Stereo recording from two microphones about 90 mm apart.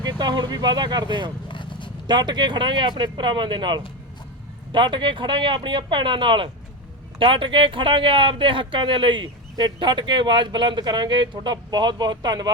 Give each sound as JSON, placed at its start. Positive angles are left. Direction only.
{"t": 0.0, "sound": "speech", "side_deg": -50}
{"t": 1.5, "sound": "a sound", "side_deg": 65}
{"t": 2.0, "sound": "speech", "side_deg": -55}